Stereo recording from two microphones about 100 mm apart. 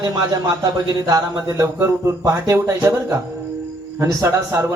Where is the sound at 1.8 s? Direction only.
30° right (ahead or behind).